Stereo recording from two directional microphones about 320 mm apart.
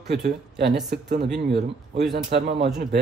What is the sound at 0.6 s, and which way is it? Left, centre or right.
Speech, right.